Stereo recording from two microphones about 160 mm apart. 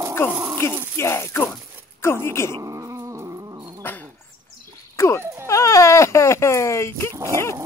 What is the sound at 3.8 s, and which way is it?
Dog, 10° left (ahead or behind).